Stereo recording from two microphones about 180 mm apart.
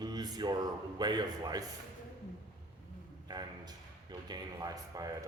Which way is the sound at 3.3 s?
20° right (ahead or behind).